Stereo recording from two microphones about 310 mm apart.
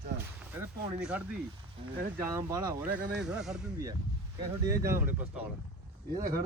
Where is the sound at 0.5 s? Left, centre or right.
Centre.